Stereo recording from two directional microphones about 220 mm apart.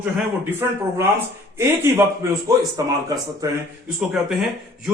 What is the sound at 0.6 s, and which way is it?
Speech, 10° right (ahead or behind).